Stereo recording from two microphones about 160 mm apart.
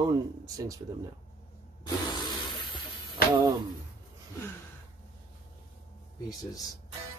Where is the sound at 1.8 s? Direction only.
25° left (ahead or behind).